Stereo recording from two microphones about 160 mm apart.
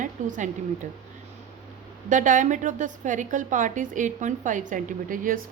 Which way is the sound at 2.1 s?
55° right (ahead or behind).